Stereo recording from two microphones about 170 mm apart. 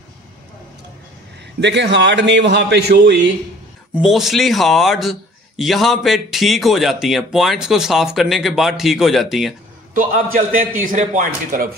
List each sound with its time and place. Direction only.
1.6 s a man's voice: 90° right
3.9 s speech: centre (ahead or behind)
9.9 s a man's voice: 55° right (ahead or behind)